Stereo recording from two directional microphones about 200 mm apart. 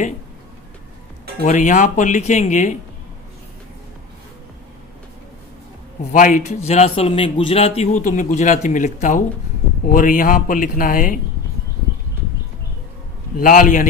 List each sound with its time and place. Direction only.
1.4 s a man's voice: 40° left (ahead or behind)
6.1 s a man's voice: 40° left (ahead or behind)
13.4 s speech: 45° left (ahead or behind)